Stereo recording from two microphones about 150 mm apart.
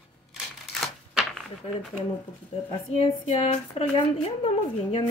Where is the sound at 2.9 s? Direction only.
40° left (ahead or behind).